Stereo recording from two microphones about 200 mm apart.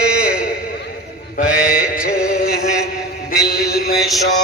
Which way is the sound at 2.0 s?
50° left (ahead or behind).